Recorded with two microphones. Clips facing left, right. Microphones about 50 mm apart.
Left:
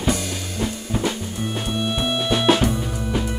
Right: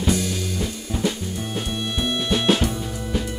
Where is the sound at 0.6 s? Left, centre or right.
Centre.